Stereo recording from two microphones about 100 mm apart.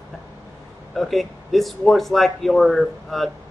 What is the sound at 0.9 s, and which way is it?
Speech, centre (ahead or behind).